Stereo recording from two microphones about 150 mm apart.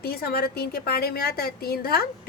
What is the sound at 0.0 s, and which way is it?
Speech, 90° left.